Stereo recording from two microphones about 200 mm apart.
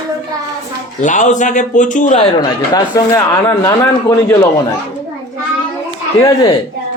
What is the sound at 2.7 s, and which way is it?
Speech, 15° left (ahead or behind).